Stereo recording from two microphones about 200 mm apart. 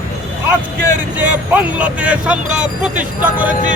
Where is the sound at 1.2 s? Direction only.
5° right (ahead or behind).